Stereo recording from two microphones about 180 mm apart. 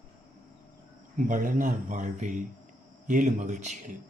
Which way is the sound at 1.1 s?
45° right (ahead or behind).